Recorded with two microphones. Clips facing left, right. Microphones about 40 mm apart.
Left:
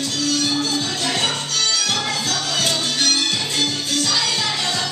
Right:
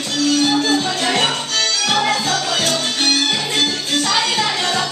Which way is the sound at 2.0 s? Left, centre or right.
Right.